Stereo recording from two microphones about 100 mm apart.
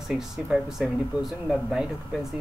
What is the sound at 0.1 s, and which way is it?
Speech, 5° right (ahead or behind).